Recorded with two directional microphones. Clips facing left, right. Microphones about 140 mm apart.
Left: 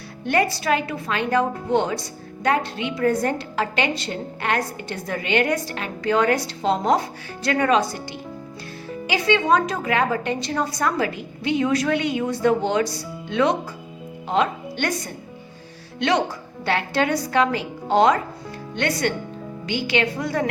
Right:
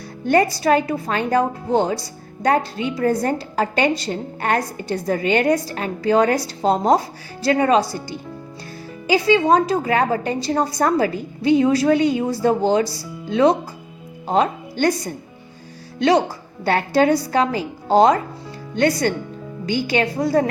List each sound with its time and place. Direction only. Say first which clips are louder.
0.3 s a woman's voice: right 5 dB; 40° right (ahead or behind)
9.0 s a woman's voice: right 4 dB; 35° right (ahead or behind)